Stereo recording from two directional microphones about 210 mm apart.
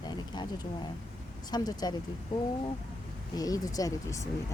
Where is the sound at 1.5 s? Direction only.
20° left (ahead or behind).